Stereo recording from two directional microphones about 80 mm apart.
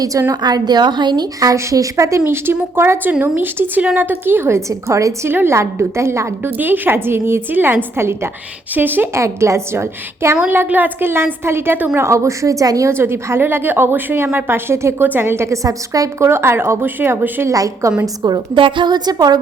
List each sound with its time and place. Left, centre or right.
0.0 s a woman's voice: right
1.5 s a woman's voice: right
5.3 s speech: right
6.6 s a woman's voice: right
9.2 s a woman's voice: right
11.9 s speech: right
12.9 s a woman's voice: right
15.6 s a woman's voice: right
16.3 s a woman's voice: right
17.5 s a woman's voice: right
18.5 s a woman's voice: right